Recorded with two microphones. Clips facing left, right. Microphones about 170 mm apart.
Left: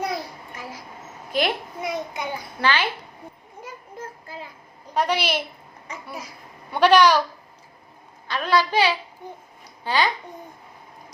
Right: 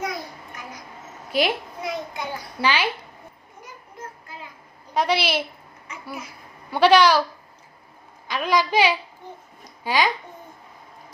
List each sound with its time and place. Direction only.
0.5 s a sound: 30° left (ahead or behind)
1.3 s a child's voice: 10° right (ahead or behind)
1.8 s a child's voice: 20° left (ahead or behind)
2.6 s a woman's voice: 10° right (ahead or behind)
4.9 s a woman's voice: 10° right (ahead or behind)
6.7 s a woman's voice: 10° right (ahead or behind)
8.3 s a woman's voice: 10° right (ahead or behind)